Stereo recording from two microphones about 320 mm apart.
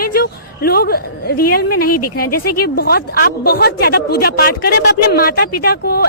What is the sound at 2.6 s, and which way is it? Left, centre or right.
A woman's voice, left.